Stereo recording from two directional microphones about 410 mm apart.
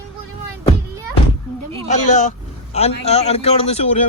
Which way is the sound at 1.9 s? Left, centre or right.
Centre.